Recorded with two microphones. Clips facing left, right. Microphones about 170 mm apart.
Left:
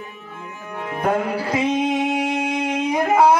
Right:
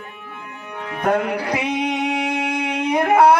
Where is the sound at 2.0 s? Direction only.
65° right (ahead or behind).